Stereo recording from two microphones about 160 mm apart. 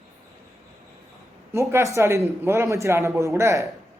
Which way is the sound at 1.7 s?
20° right (ahead or behind).